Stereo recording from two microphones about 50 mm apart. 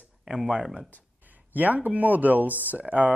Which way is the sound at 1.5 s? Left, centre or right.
Right.